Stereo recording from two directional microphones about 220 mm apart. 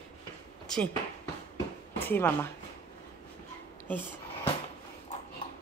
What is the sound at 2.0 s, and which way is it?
Speech, 10° left (ahead or behind).